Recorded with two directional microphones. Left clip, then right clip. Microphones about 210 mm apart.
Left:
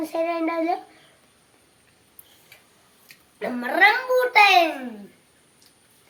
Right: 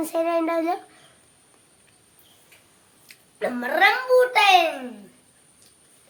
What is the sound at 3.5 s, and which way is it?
A child's voice, 5° right (ahead or behind).